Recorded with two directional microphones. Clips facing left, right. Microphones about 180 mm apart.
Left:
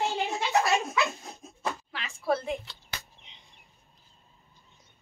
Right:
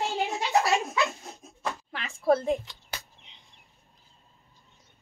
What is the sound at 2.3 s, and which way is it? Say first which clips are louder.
Speech: right 5 dB; 35° right (ahead or behind).